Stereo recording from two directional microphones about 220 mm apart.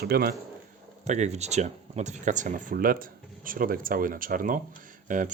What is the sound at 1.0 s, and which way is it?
Speech, 30° right (ahead or behind).